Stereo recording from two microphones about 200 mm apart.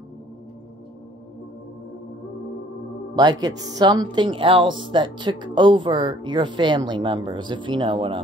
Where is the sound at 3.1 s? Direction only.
20° right (ahead or behind).